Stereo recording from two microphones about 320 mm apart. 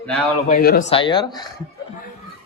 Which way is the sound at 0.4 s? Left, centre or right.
Left.